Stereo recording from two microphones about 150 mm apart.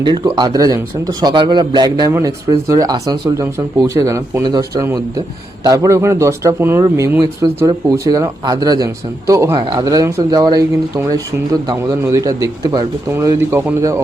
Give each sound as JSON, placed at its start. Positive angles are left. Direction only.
{"t": 0.0, "sound": "speech", "side_deg": -30}